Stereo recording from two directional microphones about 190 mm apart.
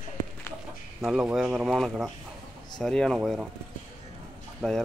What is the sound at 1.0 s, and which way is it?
Speech, centre (ahead or behind).